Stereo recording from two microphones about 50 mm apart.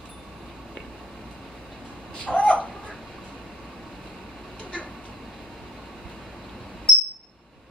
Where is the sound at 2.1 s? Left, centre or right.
Left.